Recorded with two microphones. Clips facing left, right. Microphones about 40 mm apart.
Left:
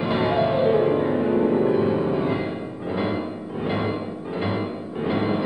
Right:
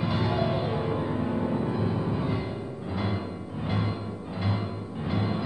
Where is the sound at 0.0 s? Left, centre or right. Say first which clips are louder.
Left 6 dB; left.